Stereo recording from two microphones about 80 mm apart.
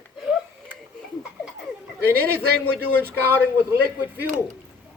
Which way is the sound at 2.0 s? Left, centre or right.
Right.